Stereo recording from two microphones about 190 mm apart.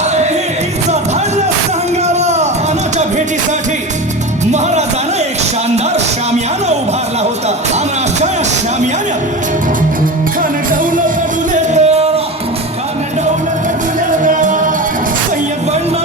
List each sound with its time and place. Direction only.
2.1 s a sound: 35° right (ahead or behind)
10.7 s music: 45° right (ahead or behind)
11.7 s music: 35° right (ahead or behind)
14.3 s music: 40° right (ahead or behind)